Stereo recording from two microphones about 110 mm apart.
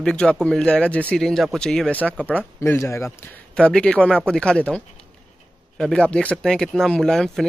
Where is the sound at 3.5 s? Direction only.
10° left (ahead or behind).